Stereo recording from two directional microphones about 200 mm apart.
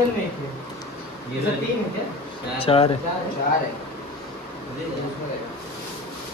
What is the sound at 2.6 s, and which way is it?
Speech, 30° left (ahead or behind).